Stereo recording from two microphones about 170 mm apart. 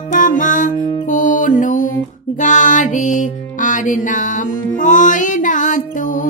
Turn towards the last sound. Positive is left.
turn(degrees=50)  # may be behind; listen again after turning